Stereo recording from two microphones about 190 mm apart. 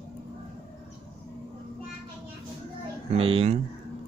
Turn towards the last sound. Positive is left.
turn(degrees=-30)  # may be behind; listen again after turning